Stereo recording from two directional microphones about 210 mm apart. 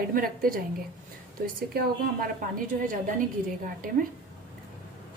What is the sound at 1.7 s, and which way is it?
Speech, 45° right (ahead or behind).